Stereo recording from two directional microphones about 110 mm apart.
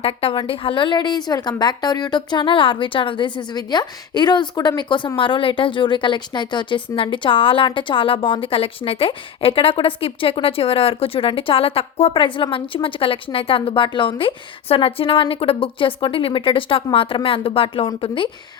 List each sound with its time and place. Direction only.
0.0 s a woman's voice: 60° left (ahead or behind)
12.2 s speech: 50° left (ahead or behind)